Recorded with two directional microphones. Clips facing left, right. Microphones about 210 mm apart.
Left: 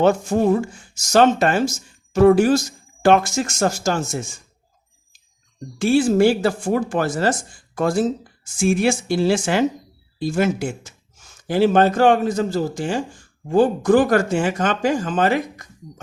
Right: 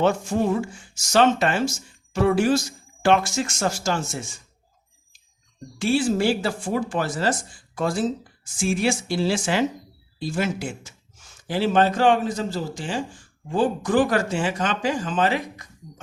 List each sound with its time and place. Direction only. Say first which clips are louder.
0.0 s speech: left 4 dB; 45° left (ahead or behind)
5.8 s speech: left 6 dB; 45° left (ahead or behind)